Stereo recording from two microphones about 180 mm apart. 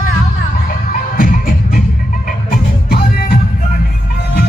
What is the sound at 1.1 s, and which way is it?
Music, 50° left (ahead or behind).